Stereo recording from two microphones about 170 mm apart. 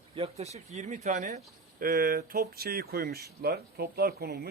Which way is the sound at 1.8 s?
60° right (ahead or behind).